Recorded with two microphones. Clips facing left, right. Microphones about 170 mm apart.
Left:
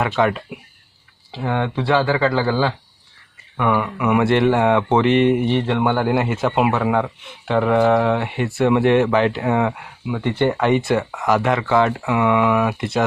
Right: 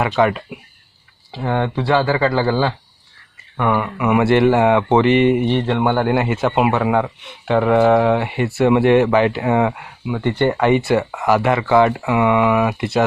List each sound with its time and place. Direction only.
0.0 s speech: 5° right (ahead or behind)